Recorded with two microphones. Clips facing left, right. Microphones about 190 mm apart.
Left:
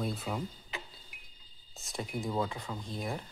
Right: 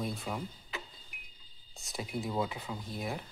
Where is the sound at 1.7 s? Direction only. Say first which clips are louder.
Even; centre (ahead or behind).